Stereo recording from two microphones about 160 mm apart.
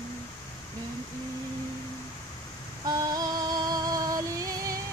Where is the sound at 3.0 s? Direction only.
25° right (ahead or behind).